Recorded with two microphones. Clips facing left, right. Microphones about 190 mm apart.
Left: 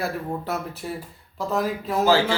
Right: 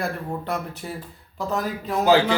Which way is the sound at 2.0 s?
20° right (ahead or behind).